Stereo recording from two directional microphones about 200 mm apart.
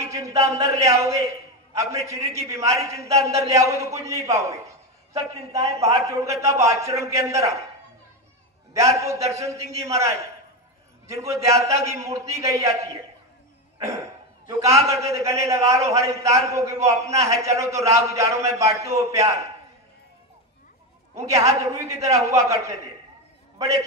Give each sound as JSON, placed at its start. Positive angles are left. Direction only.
{"t": 0.1, "sound": "a man's voice", "side_deg": -15}
{"t": 8.7, "sound": "a man's voice", "side_deg": -15}
{"t": 11.2, "sound": "a man's voice", "side_deg": -15}
{"t": 13.8, "sound": "a man's voice", "side_deg": -15}
{"t": 21.1, "sound": "a man's voice", "side_deg": -15}